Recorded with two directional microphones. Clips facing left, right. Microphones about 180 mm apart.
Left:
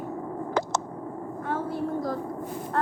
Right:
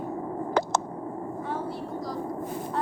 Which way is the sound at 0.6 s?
65° right (ahead or behind).